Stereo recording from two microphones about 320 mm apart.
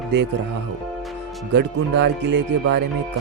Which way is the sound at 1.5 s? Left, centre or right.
Right.